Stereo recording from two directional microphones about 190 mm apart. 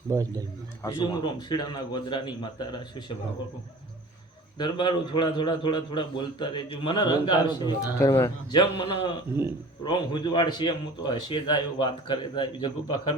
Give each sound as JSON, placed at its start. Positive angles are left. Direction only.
{"t": 0.1, "sound": "a man's voice", "side_deg": -15}
{"t": 0.8, "sound": "a man's voice", "side_deg": 20}
{"t": 4.5, "sound": "a man's voice", "side_deg": 25}
{"t": 8.8, "sound": "a man's voice", "side_deg": 30}